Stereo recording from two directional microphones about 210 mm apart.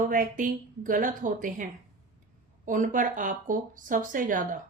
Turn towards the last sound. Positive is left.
turn(degrees=-40)  # may be behind; listen again after turning